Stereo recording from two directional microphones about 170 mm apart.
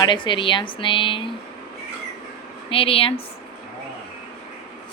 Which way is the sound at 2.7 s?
35° left (ahead or behind).